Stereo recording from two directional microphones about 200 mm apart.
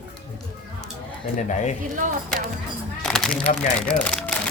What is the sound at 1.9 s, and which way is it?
Speech, 40° right (ahead or behind).